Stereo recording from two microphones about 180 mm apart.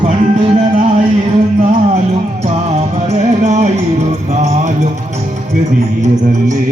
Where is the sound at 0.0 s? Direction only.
40° right (ahead or behind).